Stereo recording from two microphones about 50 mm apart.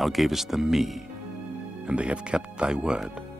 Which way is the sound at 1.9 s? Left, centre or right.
Right.